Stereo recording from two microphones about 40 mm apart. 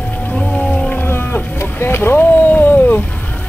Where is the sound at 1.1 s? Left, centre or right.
Left.